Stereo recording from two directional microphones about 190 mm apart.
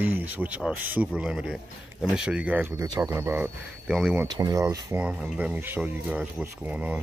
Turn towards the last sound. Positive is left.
turn(degrees=-10)  # may be behind; listen again after turning